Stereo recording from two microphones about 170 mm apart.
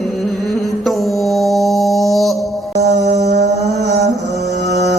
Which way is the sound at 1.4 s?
Centre (ahead or behind).